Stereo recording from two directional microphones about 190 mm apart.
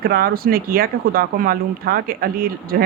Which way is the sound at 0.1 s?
50° right (ahead or behind).